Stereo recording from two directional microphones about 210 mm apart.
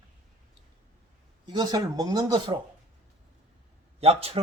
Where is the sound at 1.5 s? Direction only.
20° right (ahead or behind).